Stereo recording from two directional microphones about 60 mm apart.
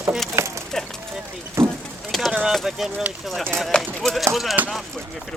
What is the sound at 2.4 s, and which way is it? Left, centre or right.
Speech, centre.